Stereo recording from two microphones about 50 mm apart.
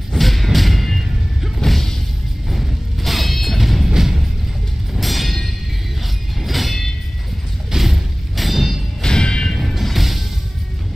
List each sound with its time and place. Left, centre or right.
0.1 s music: centre
6.4 s train: centre
7.7 s a sound: centre
9.0 s music: centre
9.6 s music: centre